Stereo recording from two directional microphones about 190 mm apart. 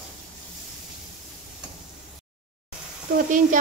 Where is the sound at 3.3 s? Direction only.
45° right (ahead or behind).